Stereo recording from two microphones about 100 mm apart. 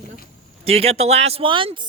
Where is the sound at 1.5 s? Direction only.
55° right (ahead or behind).